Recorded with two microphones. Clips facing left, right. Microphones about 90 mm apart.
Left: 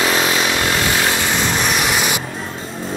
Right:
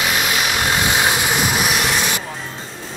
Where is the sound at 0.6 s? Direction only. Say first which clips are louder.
Even; 20° right (ahead or behind).